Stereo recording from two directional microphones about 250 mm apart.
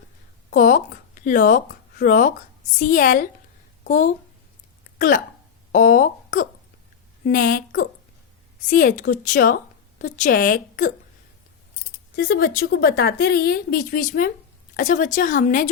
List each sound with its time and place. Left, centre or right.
0.5 s a woman's voice: left
12.1 s speech: left